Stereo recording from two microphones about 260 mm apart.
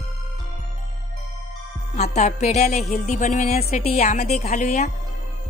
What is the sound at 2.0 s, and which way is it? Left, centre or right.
A woman's voice, left.